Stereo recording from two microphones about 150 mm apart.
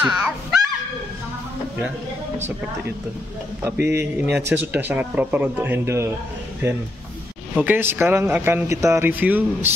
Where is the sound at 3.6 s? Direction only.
15° right (ahead or behind).